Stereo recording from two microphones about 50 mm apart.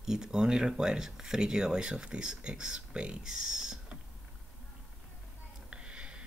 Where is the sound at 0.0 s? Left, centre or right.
Centre.